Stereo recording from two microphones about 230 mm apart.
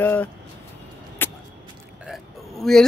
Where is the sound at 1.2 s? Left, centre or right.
Centre.